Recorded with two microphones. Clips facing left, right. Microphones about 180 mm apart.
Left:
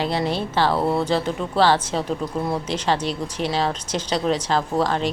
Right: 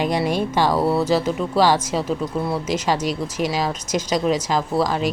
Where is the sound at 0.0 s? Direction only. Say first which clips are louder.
Right 3 dB; 15° right (ahead or behind).